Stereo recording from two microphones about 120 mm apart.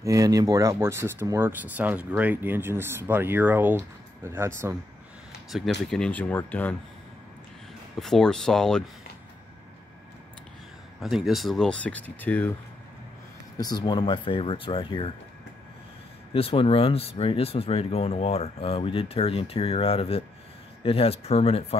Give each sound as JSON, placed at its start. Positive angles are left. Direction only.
{"t": 0.0, "sound": "speech", "side_deg": -25}
{"t": 5.5, "sound": "speech", "side_deg": 5}
{"t": 8.0, "sound": "speech", "side_deg": 5}
{"t": 11.0, "sound": "speech", "side_deg": -5}
{"t": 13.6, "sound": "speech", "side_deg": 35}
{"t": 16.3, "sound": "speech", "side_deg": 50}